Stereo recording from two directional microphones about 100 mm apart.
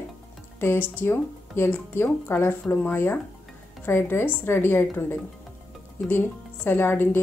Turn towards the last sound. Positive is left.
turn(degrees=20)  # may be behind; listen again after turning